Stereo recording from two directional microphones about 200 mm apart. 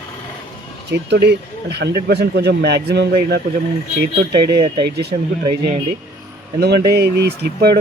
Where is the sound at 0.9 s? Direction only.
55° right (ahead or behind).